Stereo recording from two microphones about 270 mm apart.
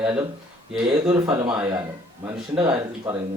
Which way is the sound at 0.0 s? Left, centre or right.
Centre.